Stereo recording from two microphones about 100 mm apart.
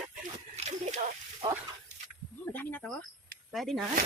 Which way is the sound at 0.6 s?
90° right.